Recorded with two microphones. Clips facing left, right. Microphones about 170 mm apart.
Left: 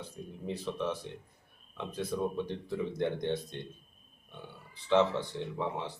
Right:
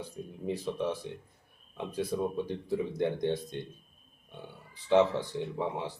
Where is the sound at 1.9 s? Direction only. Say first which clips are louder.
Right 2 dB; 15° right (ahead or behind).